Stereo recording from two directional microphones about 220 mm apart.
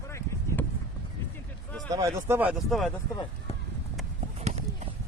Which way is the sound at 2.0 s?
10° right (ahead or behind).